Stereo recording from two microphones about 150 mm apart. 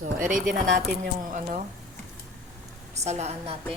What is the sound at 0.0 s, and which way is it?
Speech, 60° right (ahead or behind).